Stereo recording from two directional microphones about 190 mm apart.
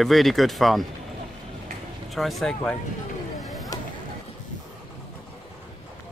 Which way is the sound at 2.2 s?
Centre (ahead or behind).